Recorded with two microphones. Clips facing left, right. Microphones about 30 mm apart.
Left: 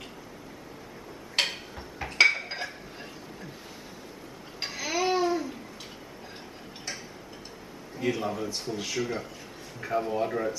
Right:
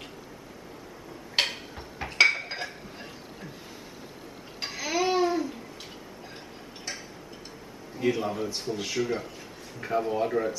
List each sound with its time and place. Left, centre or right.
1.4 s tick-tock: centre
2.0 s dishes: centre
4.6 s babbling: centre
8.0 s a man's voice: centre